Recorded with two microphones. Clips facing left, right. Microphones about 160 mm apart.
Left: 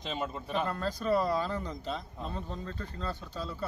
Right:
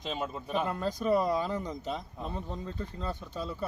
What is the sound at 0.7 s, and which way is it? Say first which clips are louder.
Speech: right 2 dB; 15° right (ahead or behind).